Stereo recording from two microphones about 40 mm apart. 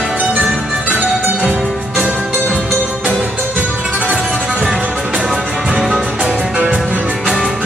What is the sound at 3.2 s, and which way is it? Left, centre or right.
Music, right.